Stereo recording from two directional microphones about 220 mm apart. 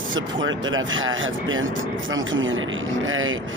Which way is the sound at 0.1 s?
60° right (ahead or behind).